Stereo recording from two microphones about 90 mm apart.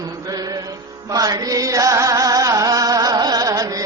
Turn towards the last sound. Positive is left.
turn(degrees=-40)  # may be behind; listen again after turning